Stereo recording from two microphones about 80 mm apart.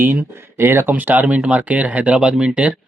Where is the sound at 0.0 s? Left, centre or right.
Right.